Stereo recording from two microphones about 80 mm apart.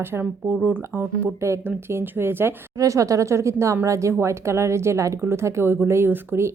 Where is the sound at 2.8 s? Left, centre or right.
Right.